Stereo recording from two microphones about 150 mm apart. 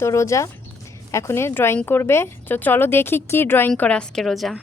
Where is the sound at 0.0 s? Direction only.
20° left (ahead or behind).